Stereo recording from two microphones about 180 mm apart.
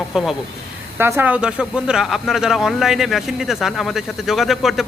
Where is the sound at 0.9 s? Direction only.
15° right (ahead or behind).